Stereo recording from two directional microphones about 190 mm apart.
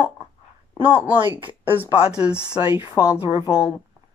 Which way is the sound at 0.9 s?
10° right (ahead or behind).